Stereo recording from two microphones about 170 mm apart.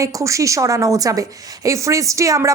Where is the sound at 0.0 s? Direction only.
20° right (ahead or behind).